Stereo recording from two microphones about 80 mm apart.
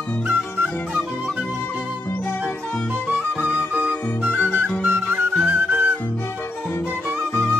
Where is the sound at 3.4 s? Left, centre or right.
Centre.